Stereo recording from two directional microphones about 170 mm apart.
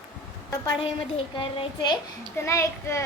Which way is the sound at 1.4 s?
30° left (ahead or behind).